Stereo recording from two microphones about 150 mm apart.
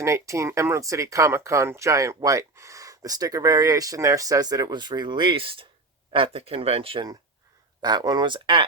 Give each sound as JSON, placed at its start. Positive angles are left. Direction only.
{"t": 0.0, "sound": "speech", "side_deg": -20}